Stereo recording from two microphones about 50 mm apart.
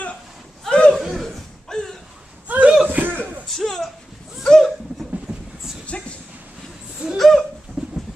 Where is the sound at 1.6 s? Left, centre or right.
Centre.